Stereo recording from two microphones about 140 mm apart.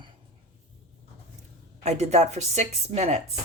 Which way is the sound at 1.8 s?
55° right (ahead or behind).